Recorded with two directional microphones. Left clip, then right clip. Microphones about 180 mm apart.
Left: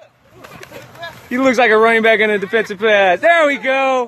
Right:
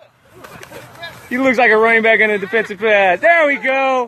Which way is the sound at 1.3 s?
15° left (ahead or behind).